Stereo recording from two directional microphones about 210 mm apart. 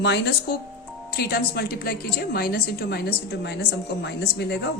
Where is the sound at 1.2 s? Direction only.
50° left (ahead or behind).